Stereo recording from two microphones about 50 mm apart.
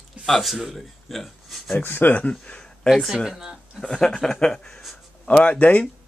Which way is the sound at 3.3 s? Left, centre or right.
Centre.